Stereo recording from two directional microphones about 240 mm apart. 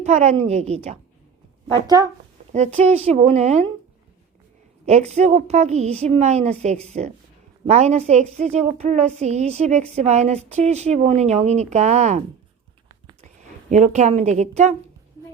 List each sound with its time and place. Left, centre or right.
0.0 s speech: right
1.9 s speech: centre
2.5 s speech: right
4.9 s speech: right
13.2 s speech: right